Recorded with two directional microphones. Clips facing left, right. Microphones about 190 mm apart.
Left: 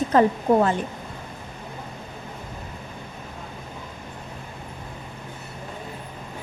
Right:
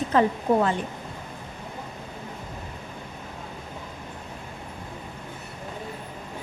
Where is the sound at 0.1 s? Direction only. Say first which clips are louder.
Left 3 dB; 45° left (ahead or behind).